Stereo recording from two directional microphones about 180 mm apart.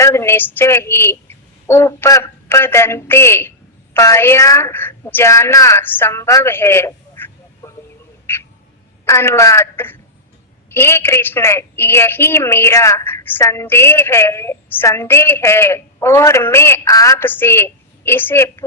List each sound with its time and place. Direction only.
0.0 s a woman's voice: 15° left (ahead or behind)
8.3 s a sound: 10° left (ahead or behind)
9.0 s a woman's voice: 15° left (ahead or behind)